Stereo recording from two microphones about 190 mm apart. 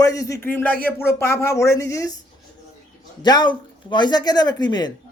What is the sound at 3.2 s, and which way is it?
Speech, 25° left (ahead or behind).